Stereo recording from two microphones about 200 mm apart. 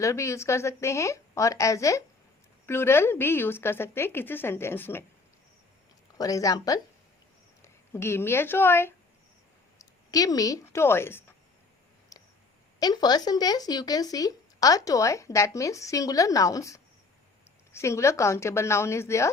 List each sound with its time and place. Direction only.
0.0 s speech: 15° left (ahead or behind)
6.1 s speech: 15° left (ahead or behind)
12.8 s speech: 20° left (ahead or behind)